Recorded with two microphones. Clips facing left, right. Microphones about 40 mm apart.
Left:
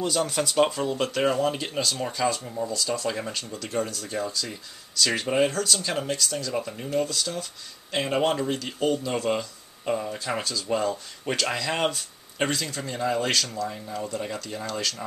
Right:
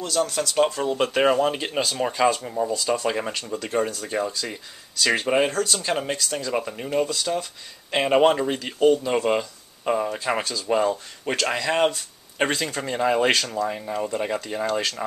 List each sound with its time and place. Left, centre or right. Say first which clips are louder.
0.0 s speech: right 1 dB; centre
0.8 s speech: right 4 dB; centre
12.4 s speech: right 4 dB; right